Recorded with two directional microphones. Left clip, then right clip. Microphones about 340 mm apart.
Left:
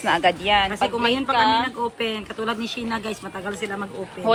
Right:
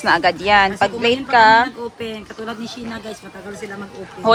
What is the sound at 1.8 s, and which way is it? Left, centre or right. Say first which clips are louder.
Speech: left 3 dB; centre.